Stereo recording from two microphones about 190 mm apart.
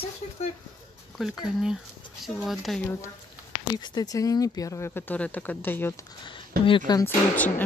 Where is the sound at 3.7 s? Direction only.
20° left (ahead or behind).